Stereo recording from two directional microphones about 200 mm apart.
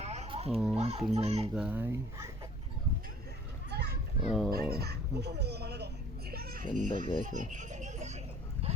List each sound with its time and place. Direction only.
0.0 s babbling: 35° right (ahead or behind)
0.5 s speech: 5° right (ahead or behind)
0.8 s a child's voice: 30° right (ahead or behind)
1.5 s speech: 5° right (ahead or behind)
3.7 s children playing: 55° right (ahead or behind)
4.3 s speech: centre (ahead or behind)
4.5 s a sound: 50° right (ahead or behind); by 8.8 s 30° right (ahead or behind)